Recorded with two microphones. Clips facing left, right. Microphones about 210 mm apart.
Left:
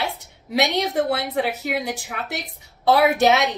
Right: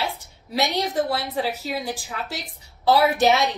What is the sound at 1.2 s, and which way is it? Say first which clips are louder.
Speech: left 2 dB; 25° left (ahead or behind).